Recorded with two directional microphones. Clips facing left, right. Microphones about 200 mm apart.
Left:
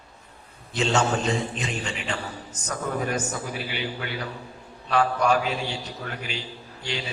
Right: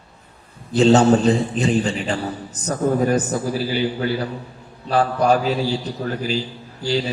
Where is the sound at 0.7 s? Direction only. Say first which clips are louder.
Right 11 dB; 35° right (ahead or behind).